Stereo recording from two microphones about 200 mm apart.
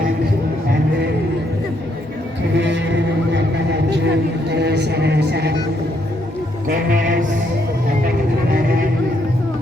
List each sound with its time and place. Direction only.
2.6 s speech: 60° right (ahead or behind)
6.7 s music: 45° right (ahead or behind)